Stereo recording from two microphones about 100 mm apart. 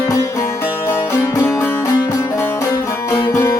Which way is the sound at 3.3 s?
25° left (ahead or behind).